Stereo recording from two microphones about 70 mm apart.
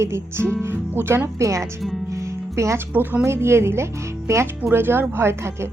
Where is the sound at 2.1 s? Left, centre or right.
Right.